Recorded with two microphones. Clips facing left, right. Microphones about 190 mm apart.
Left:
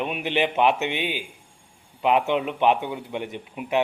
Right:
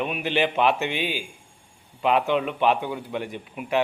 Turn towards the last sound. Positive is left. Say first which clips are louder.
# even
turn(degrees=20)  # may be behind; listen again after turning